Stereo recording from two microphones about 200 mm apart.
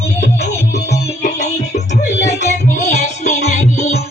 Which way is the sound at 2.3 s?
35° left (ahead or behind).